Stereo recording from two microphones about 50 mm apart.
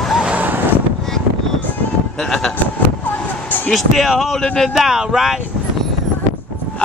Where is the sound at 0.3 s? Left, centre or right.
Right.